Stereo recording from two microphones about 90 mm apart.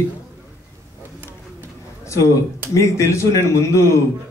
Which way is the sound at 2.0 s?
35° left (ahead or behind).